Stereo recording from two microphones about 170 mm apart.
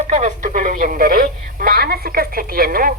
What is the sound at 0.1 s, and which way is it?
Speech, 45° right (ahead or behind).